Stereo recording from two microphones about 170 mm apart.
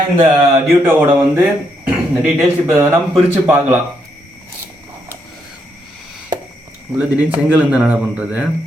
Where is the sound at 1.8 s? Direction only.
10° right (ahead or behind).